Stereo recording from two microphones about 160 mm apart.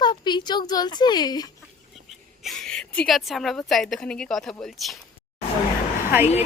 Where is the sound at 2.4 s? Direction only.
Centre (ahead or behind).